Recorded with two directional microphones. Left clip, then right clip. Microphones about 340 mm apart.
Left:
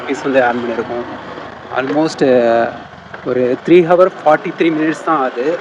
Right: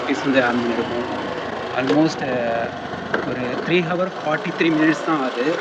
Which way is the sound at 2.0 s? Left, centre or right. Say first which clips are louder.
Left 9 dB; centre.